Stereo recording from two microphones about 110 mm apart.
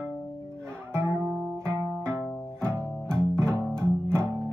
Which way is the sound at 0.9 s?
20° right (ahead or behind).